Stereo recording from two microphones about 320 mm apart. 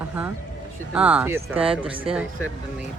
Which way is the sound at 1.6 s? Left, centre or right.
Centre.